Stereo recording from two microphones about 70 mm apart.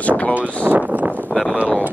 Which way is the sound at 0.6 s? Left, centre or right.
Right.